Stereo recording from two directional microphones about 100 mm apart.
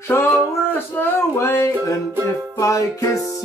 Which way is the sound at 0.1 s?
25° left (ahead or behind).